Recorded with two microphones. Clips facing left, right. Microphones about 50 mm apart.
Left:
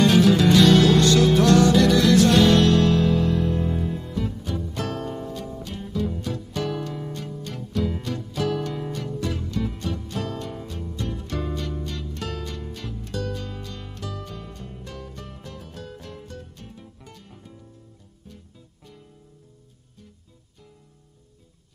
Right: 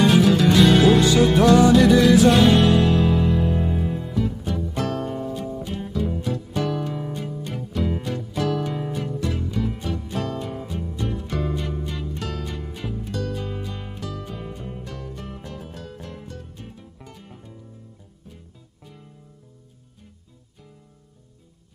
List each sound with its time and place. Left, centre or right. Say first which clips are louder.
0.6 s music: right 3 dB; centre